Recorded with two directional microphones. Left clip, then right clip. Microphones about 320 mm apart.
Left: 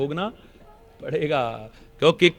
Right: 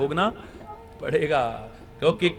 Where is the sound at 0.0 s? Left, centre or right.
Centre.